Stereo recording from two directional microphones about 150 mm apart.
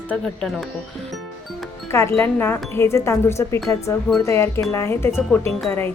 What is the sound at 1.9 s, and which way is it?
A woman's voice, 15° left (ahead or behind).